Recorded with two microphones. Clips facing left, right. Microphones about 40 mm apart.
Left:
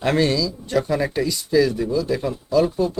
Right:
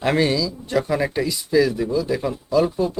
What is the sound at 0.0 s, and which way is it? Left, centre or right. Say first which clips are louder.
A man's voice: even; centre.